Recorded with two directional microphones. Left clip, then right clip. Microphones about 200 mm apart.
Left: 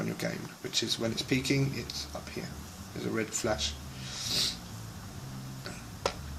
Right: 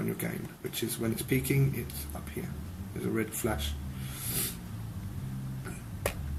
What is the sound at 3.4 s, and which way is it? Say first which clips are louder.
Speech: left 3 dB; 30° left (ahead or behind).